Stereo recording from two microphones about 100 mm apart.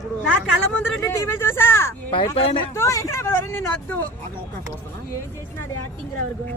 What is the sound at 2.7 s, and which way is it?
Speech, 30° left (ahead or behind).